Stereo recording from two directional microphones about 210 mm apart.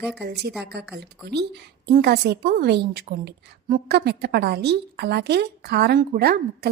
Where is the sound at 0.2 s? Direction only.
50° right (ahead or behind).